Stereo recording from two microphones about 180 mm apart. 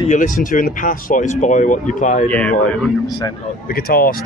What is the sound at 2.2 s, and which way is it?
Speech, 10° left (ahead or behind).